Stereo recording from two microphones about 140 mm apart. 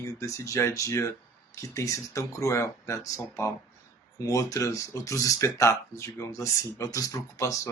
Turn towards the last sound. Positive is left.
turn(degrees=25)  # may be behind; listen again after turning